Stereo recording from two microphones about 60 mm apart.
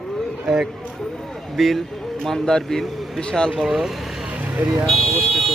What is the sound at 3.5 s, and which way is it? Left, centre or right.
Speech, centre.